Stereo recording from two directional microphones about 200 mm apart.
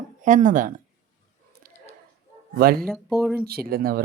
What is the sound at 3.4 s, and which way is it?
Speech, 50° right (ahead or behind).